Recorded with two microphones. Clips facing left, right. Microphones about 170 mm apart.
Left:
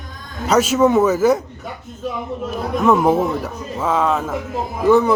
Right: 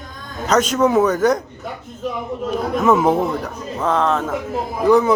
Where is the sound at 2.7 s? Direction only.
Centre (ahead or behind).